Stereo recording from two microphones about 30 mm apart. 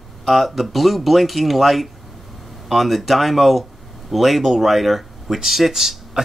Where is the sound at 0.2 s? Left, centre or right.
Centre.